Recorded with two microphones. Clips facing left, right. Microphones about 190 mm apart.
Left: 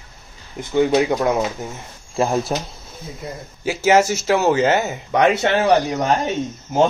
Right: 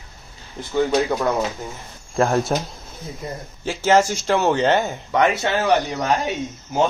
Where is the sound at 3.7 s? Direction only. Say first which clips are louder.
Left 2 dB; 10° left (ahead or behind).